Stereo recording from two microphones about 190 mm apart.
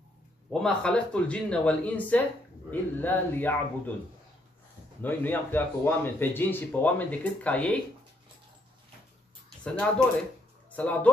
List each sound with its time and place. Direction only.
0.5 s speech: 5° left (ahead or behind)
5.0 s speech: 10° left (ahead or behind)
10.8 s speech: 5° left (ahead or behind)